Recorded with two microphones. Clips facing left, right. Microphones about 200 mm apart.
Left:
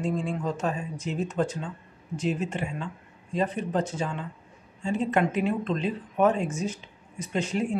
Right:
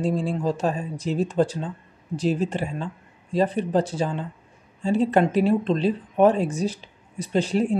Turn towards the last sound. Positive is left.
turn(degrees=-35)  # may be behind; listen again after turning